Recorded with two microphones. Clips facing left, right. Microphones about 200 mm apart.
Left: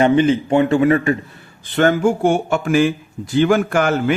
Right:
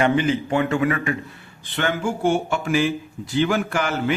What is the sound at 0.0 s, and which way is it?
Speech, 25° left (ahead or behind).